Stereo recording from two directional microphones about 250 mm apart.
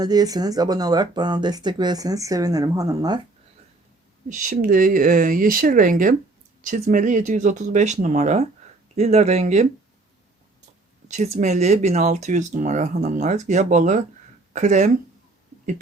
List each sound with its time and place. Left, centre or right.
0.0 s speech: centre
4.3 s speech: right
11.1 s speech: right